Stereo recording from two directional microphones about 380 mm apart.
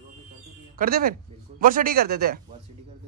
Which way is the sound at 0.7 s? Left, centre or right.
Right.